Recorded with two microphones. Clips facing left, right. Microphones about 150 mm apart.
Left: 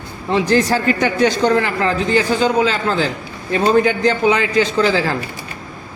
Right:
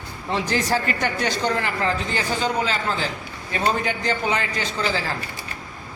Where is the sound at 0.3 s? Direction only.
90° left.